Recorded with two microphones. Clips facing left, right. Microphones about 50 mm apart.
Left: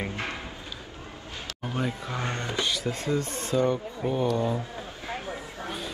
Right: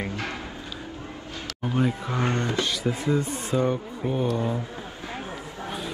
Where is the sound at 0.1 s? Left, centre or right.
Left.